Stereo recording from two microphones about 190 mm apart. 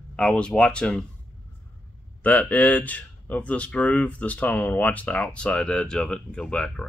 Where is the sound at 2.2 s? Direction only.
10° left (ahead or behind).